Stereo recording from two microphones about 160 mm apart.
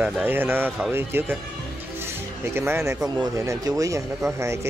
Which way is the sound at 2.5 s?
15° right (ahead or behind).